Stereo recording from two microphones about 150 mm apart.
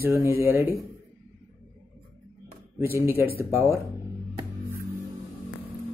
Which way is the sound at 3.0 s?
15° right (ahead or behind).